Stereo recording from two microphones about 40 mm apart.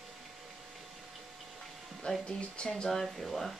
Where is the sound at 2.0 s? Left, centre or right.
Left.